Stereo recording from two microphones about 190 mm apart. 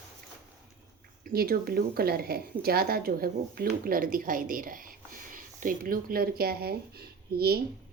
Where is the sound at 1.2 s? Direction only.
55° right (ahead or behind).